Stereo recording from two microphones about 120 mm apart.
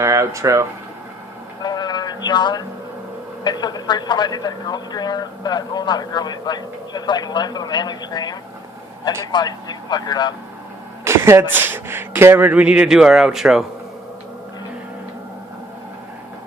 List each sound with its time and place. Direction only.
0.0 s speech: 25° right (ahead or behind)
1.6 s a sound: 35° left (ahead or behind)
3.4 s a man's voice: 35° left (ahead or behind)
11.0 s speech: 20° right (ahead or behind); by 13.7 s 5° right (ahead or behind)